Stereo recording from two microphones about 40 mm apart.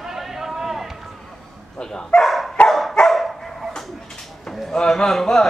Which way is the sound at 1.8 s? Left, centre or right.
Centre.